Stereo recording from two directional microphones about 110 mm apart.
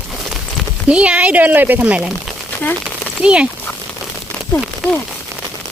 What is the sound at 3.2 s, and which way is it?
Speech, 10° right (ahead or behind).